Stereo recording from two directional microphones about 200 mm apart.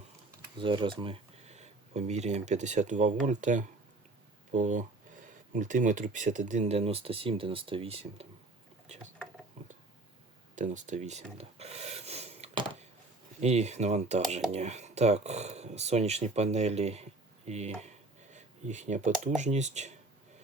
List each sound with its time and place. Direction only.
0.6 s speech: 25° right (ahead or behind)
10.5 s a sound: 40° right (ahead or behind)
13.4 s speech: 35° right (ahead or behind)